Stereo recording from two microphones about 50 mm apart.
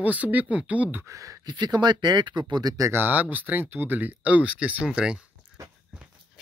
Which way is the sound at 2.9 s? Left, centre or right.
Right.